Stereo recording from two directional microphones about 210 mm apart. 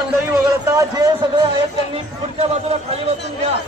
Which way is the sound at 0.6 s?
15° right (ahead or behind).